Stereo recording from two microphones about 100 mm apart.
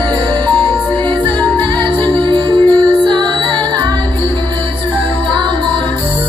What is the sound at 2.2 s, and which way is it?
Music, 55° right (ahead or behind).